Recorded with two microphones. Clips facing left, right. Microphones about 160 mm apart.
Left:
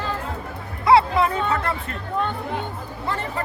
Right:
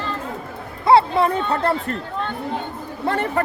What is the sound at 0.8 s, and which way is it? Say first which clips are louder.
Speech: right 2 dB; 30° right (ahead or behind).